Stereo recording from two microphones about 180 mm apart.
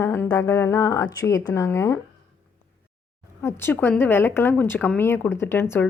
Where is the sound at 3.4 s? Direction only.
15° left (ahead or behind).